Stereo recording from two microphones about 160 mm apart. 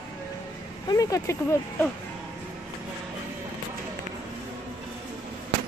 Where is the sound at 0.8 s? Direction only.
20° left (ahead or behind).